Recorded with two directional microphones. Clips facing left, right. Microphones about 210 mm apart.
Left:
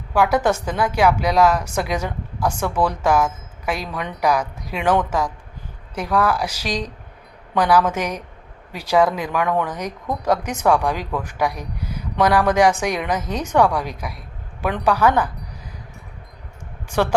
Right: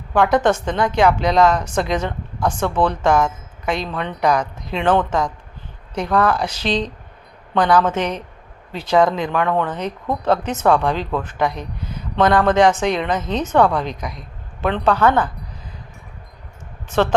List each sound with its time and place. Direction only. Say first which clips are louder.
0.1 s a woman's voice: right 2 dB; 10° left (ahead or behind)
16.9 s a woman's voice: right 2 dB; 10° left (ahead or behind)